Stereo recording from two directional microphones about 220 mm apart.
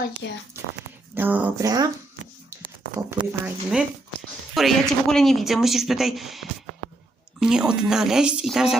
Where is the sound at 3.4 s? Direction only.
5° right (ahead or behind).